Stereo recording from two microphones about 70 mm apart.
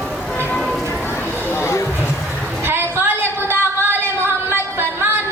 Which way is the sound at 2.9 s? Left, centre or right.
Right.